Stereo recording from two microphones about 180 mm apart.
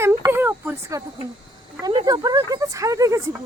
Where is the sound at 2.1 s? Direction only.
20° right (ahead or behind).